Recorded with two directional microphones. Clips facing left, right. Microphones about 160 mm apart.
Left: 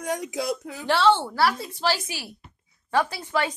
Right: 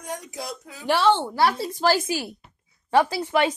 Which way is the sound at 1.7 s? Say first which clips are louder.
Right 5 dB; 50° right (ahead or behind).